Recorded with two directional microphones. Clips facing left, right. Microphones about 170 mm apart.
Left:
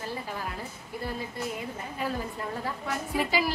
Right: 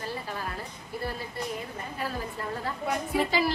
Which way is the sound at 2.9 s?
10° left (ahead or behind).